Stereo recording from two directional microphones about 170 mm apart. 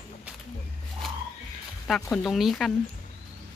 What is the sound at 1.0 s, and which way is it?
Music, centre (ahead or behind).